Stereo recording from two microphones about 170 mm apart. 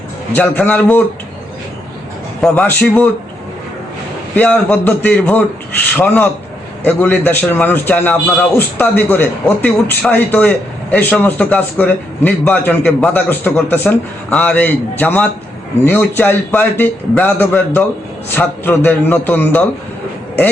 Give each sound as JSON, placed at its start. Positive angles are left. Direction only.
{"t": 0.3, "sound": "a man's voice", "side_deg": 10}
{"t": 2.4, "sound": "a man's voice", "side_deg": 10}
{"t": 4.4, "sound": "a man's voice", "side_deg": 10}